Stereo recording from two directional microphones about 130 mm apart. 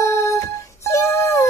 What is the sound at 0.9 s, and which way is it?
Wail, 20° left (ahead or behind).